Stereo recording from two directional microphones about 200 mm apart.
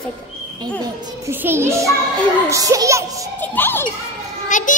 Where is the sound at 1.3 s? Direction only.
10° right (ahead or behind).